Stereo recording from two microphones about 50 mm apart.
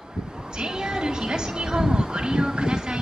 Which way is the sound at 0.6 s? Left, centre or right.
Centre.